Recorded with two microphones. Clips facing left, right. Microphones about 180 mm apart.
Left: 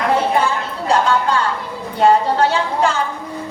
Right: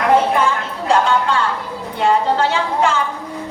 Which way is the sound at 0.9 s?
40° left (ahead or behind).